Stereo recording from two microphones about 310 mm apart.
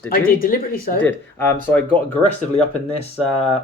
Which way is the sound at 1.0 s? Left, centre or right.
Centre.